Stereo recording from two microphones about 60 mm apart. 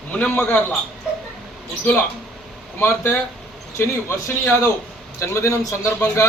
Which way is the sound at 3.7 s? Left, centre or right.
Left.